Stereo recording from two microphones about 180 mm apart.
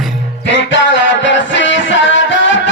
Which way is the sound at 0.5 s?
90° left.